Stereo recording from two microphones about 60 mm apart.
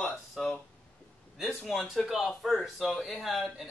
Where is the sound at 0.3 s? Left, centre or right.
Centre.